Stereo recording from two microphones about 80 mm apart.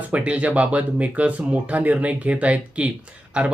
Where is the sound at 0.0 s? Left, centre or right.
Centre.